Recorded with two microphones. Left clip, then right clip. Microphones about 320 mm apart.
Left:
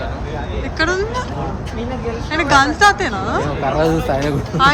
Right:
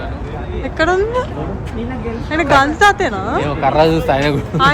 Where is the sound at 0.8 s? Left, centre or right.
Centre.